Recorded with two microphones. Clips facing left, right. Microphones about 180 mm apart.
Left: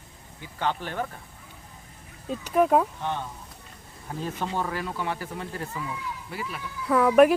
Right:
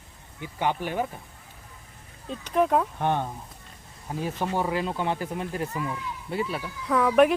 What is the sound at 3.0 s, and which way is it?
Speech, 55° right (ahead or behind).